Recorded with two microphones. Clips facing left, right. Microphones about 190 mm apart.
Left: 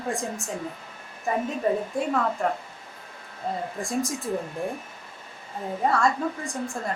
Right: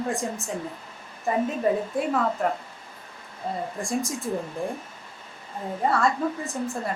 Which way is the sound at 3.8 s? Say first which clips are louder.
Even; centre (ahead or behind).